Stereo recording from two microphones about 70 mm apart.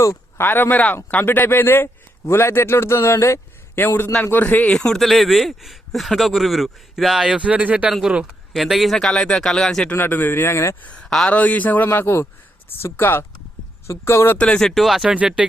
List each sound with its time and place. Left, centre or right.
0.3 s a man's voice: left
3.8 s a man's voice: left
4.9 s a man's voice: centre
8.5 s a man's voice: centre
9.9 s a man's voice: left
11.0 s speech: centre
11.3 s speech: left
11.9 s a man's voice: left
14.3 s a man's voice: centre
14.6 s speech: centre
15.0 s a man's voice: centre